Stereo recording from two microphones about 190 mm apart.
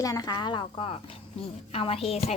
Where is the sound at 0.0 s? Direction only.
20° left (ahead or behind).